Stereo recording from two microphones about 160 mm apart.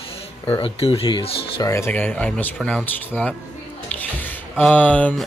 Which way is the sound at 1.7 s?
15° left (ahead or behind).